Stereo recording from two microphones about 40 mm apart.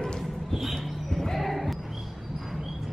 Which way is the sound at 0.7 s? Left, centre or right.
Centre.